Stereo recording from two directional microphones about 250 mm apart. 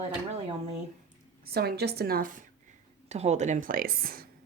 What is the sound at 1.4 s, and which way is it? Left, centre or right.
A woman's voice, right.